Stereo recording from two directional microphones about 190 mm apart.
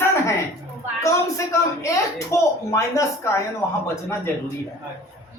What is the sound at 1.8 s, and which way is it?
Speech, 15° left (ahead or behind).